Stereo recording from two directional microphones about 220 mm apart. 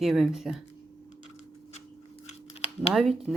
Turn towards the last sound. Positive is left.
turn(degrees=0)  # may be behind; listen again after turning